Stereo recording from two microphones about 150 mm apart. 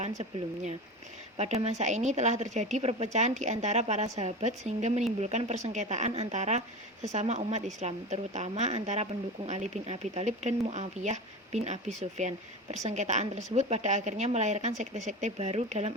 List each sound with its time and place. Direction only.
1.4 s speech: 45° right (ahead or behind)